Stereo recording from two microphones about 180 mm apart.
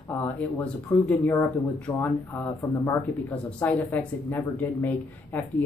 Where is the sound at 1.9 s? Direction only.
25° left (ahead or behind).